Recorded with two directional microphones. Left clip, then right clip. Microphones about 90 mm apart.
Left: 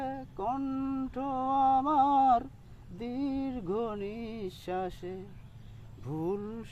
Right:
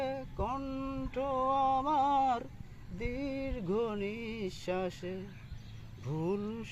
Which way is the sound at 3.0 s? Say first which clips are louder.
Left 2 dB; 45° left (ahead or behind).